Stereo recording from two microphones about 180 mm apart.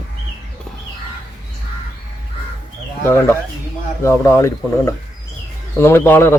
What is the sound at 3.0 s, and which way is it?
Speech, 15° left (ahead or behind).